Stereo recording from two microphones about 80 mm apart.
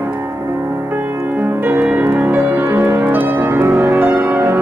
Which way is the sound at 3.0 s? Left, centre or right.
Right.